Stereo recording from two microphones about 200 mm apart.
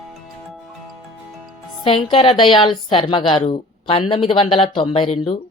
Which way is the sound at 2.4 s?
25° left (ahead or behind).